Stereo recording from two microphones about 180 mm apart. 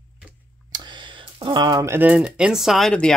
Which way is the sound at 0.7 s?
25° right (ahead or behind).